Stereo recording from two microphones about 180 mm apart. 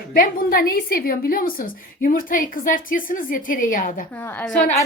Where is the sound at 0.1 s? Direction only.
55° left (ahead or behind).